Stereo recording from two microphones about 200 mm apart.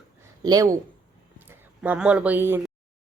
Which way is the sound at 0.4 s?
20° right (ahead or behind).